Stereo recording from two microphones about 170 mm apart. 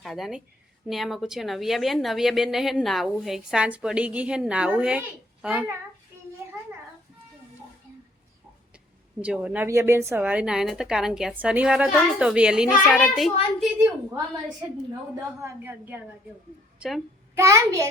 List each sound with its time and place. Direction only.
0.0 s a woman's voice: centre (ahead or behind)
9.2 s a woman's voice: 5° right (ahead or behind)
13.7 s a woman's voice: 15° right (ahead or behind)
15.4 s a woman's voice: 15° right (ahead or behind)
17.3 s a woman's voice: 15° right (ahead or behind)